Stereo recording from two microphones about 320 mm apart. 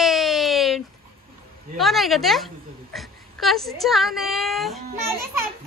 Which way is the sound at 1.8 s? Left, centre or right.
Centre.